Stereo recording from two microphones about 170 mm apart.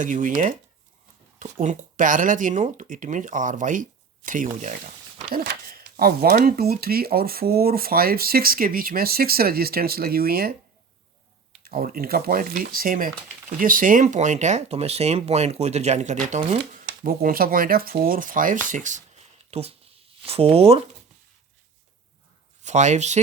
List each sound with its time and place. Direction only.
0.0 s speech: 50° right (ahead or behind)
5.3 s speech: 65° right (ahead or behind)
11.6 s speech: 60° right (ahead or behind); by 16.6 s 45° right (ahead or behind)
16.8 s speech: 60° right (ahead or behind)
19.5 s speech: 35° right (ahead or behind)
22.6 s speech: 45° right (ahead or behind)